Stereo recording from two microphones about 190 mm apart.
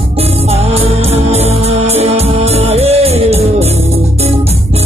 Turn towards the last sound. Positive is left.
turn(degrees=-35)  # may be behind; listen again after turning